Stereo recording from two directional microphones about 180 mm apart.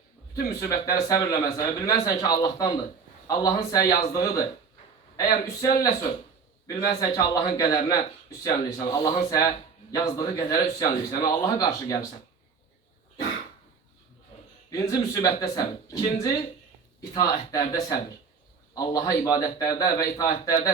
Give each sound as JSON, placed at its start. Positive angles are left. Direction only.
{"t": 0.4, "sound": "speech", "side_deg": 20}
{"t": 14.7, "sound": "speech", "side_deg": 20}